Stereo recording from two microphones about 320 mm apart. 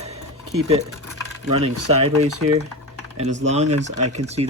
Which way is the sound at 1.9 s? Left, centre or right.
Centre.